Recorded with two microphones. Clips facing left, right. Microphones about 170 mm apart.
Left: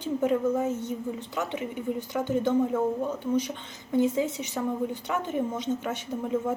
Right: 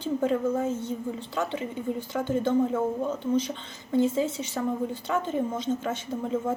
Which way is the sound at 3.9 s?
15° left (ahead or behind).